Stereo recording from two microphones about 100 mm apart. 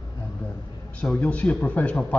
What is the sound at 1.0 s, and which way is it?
A man's voice, 10° left (ahead or behind).